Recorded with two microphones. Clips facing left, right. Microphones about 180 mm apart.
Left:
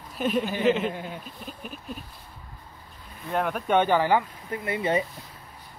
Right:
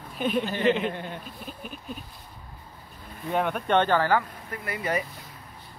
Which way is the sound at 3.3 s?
Centre (ahead or behind).